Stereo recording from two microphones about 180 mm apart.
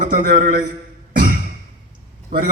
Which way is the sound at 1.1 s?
50° right (ahead or behind).